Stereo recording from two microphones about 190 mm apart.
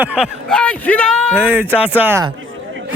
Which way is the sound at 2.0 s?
15° right (ahead or behind).